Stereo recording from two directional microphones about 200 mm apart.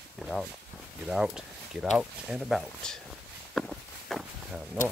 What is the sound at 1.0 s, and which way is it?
Speech, 5° right (ahead or behind).